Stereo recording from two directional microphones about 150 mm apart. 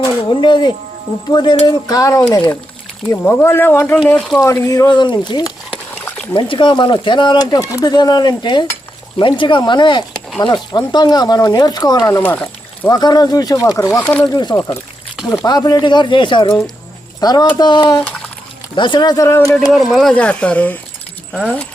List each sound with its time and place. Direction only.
0.0 s speech: 30° left (ahead or behind); by 4.0 s 15° left (ahead or behind)
4.0 s speech: centre (ahead or behind)
4.4 s speech: 20° left (ahead or behind)
5.7 s dog: 10° left (ahead or behind)
6.3 s speech: 35° left (ahead or behind); by 12.9 s 10° left (ahead or behind)
12.9 s speech: 25° left (ahead or behind)
14.0 s speech: 10° left (ahead or behind)
14.3 s speech: 25° left (ahead or behind)
19.5 s speech: centre (ahead or behind)